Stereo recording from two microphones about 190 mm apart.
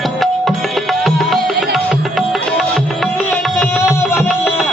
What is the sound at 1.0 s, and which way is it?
Music, centre (ahead or behind).